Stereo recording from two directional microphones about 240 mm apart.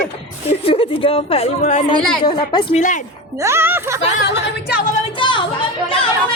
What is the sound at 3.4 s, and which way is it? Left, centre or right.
Speech, centre.